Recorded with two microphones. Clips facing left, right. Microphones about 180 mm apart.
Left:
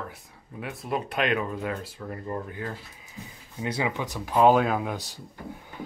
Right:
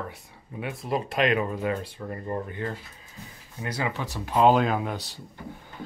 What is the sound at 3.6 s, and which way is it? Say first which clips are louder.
Speech: left 2 dB; 20° left (ahead or behind).